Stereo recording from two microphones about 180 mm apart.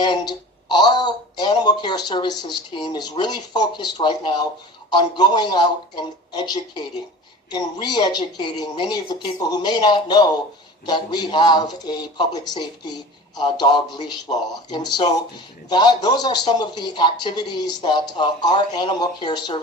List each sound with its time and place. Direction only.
0.0 s speech: 25° left (ahead or behind)